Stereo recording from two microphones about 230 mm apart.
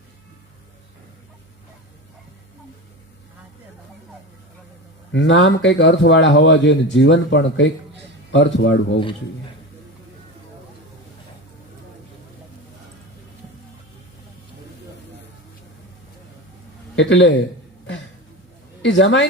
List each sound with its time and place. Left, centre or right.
5.1 s speech: left
16.9 s a man's voice: left
18.8 s speech: left